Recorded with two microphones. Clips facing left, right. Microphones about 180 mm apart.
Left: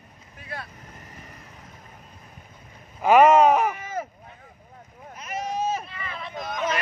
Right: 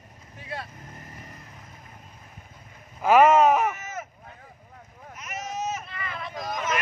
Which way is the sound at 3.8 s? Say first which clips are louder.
Left 5 dB; 30° left (ahead or behind).